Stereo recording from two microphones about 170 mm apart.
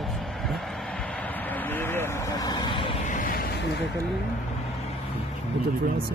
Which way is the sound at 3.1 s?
55° left (ahead or behind).